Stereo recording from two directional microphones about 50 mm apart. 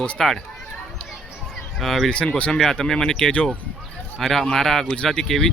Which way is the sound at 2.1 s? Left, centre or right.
Left.